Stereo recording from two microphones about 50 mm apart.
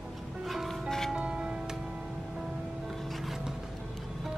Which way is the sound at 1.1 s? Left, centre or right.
Centre.